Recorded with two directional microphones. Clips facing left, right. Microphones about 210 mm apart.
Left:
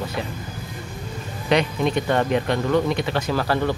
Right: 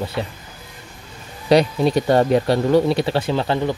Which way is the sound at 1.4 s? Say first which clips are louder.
Right 5 dB; 35° right (ahead or behind).